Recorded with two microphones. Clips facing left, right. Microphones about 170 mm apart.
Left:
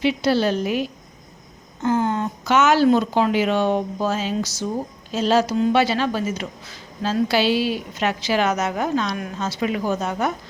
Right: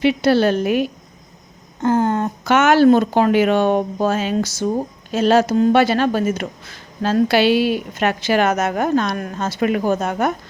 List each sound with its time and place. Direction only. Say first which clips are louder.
0.0 s speech: right 4 dB; 60° right (ahead or behind)